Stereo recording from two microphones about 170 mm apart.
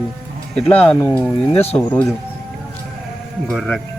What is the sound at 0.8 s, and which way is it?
Speech, 10° left (ahead or behind).